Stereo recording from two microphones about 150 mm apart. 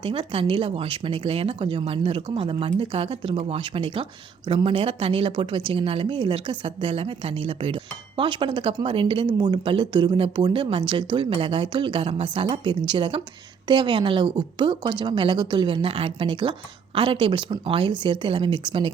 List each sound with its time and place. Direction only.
0.0 s a woman's voice: 35° right (ahead or behind)